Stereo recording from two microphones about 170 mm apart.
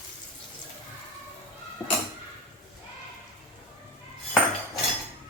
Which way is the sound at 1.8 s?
20° left (ahead or behind).